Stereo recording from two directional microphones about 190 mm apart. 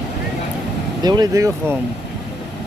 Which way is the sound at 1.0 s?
20° right (ahead or behind).